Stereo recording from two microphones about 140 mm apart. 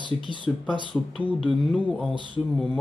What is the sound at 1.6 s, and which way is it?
Speech, 10° left (ahead or behind).